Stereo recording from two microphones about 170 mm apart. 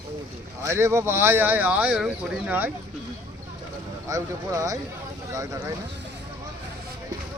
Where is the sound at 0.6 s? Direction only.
15° right (ahead or behind).